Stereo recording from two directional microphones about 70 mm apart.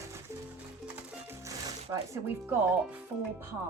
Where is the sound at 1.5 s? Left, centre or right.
Right.